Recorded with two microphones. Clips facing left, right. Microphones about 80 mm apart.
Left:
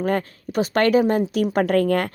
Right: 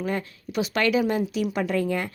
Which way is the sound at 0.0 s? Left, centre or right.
Left.